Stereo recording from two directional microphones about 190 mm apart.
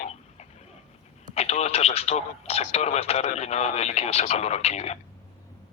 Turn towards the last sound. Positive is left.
turn(degrees=35)  # may be behind; listen again after turning